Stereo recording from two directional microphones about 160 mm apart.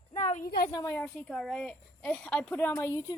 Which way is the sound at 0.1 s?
45° left (ahead or behind).